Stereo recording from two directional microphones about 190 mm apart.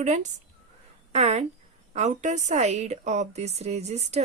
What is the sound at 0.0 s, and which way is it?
A woman's voice, 40° right (ahead or behind).